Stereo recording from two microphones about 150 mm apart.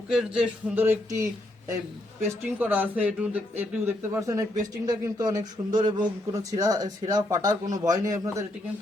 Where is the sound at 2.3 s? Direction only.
15° right (ahead or behind).